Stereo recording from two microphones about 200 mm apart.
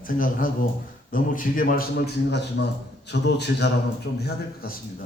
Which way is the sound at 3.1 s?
60° left (ahead or behind).